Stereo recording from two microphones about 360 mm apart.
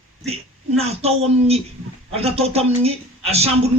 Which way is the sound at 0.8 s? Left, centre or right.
Centre.